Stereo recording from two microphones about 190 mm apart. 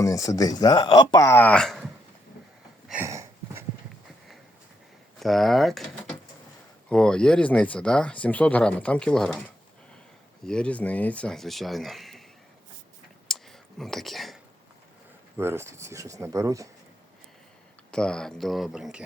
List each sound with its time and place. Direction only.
0.0 s speech: 15° left (ahead or behind); by 1.9 s centre (ahead or behind)
2.9 s a sound: 15° right (ahead or behind)
5.2 s speech: centre (ahead or behind)
10.4 s speech: 5° left (ahead or behind)
13.2 s a sound: centre (ahead or behind)
15.4 s speech: 15° right (ahead or behind)
17.9 s speech: 5° left (ahead or behind)